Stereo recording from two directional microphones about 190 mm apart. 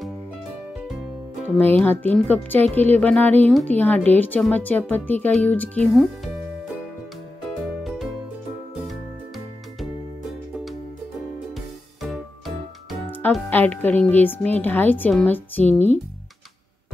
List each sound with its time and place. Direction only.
0.7 s music: centre (ahead or behind)
1.6 s speech: 10° left (ahead or behind)
7.6 s music: centre (ahead or behind)
11.5 s music: centre (ahead or behind)
13.1 s speech: 10° left (ahead or behind)